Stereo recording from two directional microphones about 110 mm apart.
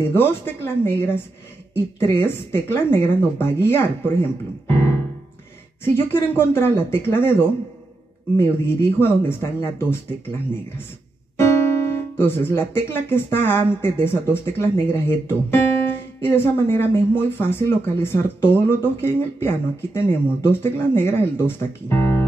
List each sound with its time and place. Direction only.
0.0 s speech: 20° left (ahead or behind)
5.9 s speech: 20° left (ahead or behind)